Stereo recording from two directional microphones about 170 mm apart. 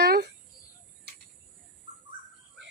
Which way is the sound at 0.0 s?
70° right (ahead or behind).